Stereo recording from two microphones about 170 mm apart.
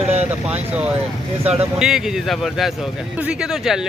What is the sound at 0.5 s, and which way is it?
Speech, 5° right (ahead or behind).